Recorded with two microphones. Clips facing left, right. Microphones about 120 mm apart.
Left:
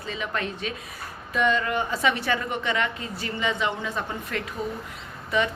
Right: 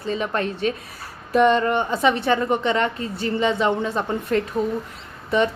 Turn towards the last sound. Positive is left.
turn(degrees=-30)  # may be behind; listen again after turning